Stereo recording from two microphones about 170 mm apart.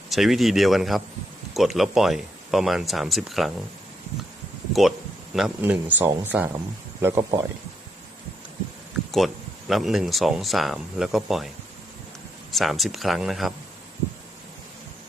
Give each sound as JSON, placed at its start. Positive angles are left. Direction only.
{"t": 0.1, "sound": "speech", "side_deg": 0}
{"t": 4.7, "sound": "speech", "side_deg": 0}
{"t": 7.0, "sound": "speech", "side_deg": -25}
{"t": 9.1, "sound": "speech", "side_deg": 0}
{"t": 12.5, "sound": "speech", "side_deg": 0}